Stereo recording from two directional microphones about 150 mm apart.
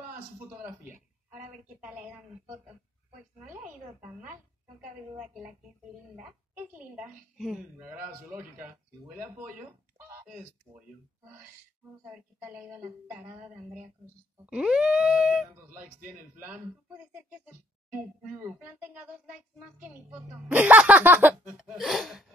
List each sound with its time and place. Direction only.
0.5 s a sound: 15° right (ahead or behind)
5.1 s wail: 5° right (ahead or behind)
6.1 s speech: 15° right (ahead or behind)
7.8 s speech: 15° right (ahead or behind)
9.7 s goose: 15° right (ahead or behind)
10.7 s speech: 10° right (ahead or behind)
14.4 s wail: 5° right (ahead or behind)
15.5 s speech: 15° right (ahead or behind)
19.8 s speech: 10° right (ahead or behind)